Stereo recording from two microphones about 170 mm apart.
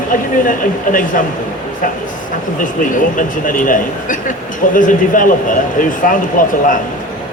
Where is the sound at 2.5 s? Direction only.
50° left (ahead or behind).